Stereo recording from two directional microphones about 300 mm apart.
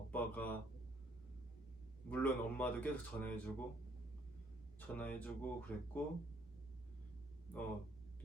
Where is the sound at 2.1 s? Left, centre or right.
Centre.